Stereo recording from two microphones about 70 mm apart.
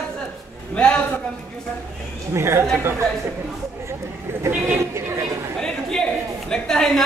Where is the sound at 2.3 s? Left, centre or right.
Right.